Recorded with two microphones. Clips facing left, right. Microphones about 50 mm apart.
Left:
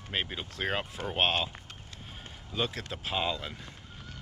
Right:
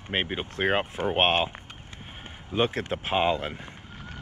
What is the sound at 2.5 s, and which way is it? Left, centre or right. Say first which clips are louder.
Speech: right 8 dB; right.